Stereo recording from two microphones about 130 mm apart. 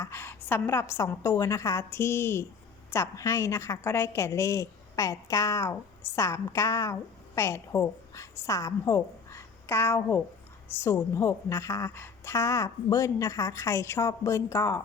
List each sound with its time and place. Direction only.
0.0 s a woman's voice: 20° left (ahead or behind)